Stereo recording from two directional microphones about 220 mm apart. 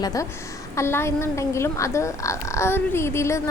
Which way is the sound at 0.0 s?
15° left (ahead or behind).